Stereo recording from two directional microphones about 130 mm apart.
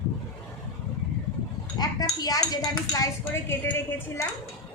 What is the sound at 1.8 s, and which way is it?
Speech, 30° left (ahead or behind).